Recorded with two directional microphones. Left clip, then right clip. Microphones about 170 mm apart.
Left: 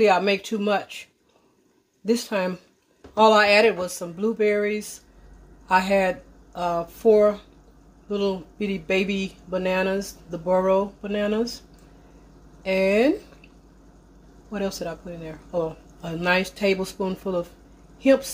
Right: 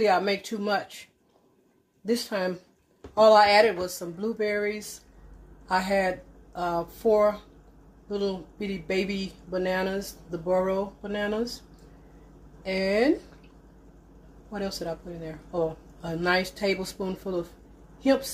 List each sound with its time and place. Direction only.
0.0 s speech: 40° left (ahead or behind)
2.0 s speech: 35° left (ahead or behind)
5.7 s speech: 40° left (ahead or behind)
10.0 s speech: 70° left (ahead or behind)
10.6 s speech: 35° left (ahead or behind)
12.6 s speech: 35° left (ahead or behind)
14.8 s speech: 35° left (ahead or behind)